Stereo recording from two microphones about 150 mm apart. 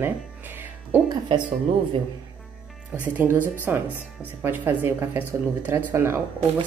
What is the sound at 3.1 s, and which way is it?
Speech, 10° right (ahead or behind).